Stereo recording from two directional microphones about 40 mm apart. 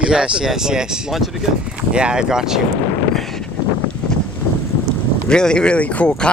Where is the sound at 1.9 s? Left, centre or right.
Right.